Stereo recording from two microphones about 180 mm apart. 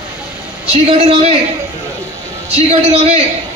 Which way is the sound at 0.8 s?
35° right (ahead or behind).